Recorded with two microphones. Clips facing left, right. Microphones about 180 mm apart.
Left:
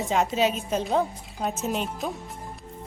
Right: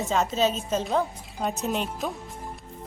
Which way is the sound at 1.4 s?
Centre (ahead or behind).